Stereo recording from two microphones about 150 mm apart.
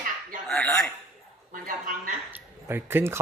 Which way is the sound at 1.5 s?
65° right (ahead or behind).